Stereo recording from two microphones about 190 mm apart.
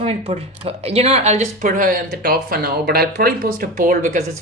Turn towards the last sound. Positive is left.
turn(degrees=-45)  # may be behind; listen again after turning